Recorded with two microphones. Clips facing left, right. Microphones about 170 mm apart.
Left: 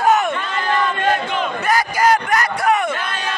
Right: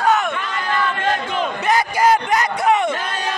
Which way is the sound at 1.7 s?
25° right (ahead or behind).